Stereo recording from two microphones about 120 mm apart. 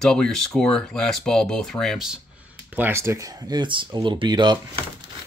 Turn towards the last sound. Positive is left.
turn(degrees=-40)  # may be behind; listen again after turning